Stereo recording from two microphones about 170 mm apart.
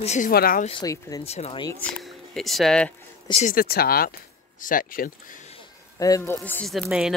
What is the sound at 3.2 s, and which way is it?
Speech, 40° left (ahead or behind).